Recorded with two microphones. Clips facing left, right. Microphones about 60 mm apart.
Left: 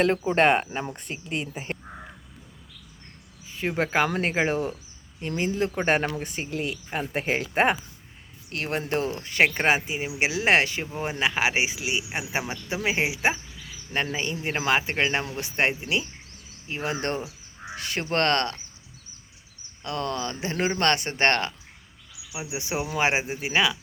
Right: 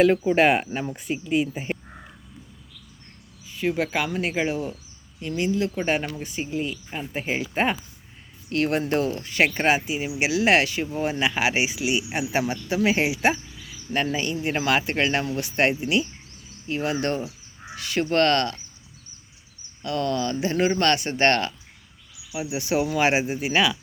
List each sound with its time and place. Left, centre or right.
0.1 s speech: centre
3.4 s speech: left
6.5 s speech: left
8.4 s speech: centre
9.2 s speech: left
10.9 s speech: centre
16.9 s speech: left
17.7 s crow: left
18.1 s speech: left
19.8 s speech: left
22.3 s speech: centre